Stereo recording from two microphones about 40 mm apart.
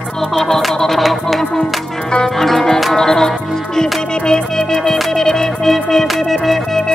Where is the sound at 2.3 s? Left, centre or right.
Centre.